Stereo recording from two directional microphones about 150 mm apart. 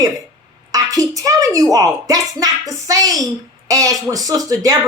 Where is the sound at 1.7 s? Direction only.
25° right (ahead or behind).